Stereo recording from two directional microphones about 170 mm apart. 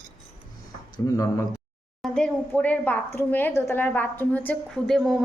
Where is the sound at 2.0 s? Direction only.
5° left (ahead or behind).